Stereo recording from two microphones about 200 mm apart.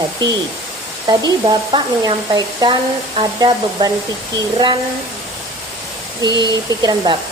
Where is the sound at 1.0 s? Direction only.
20° right (ahead or behind).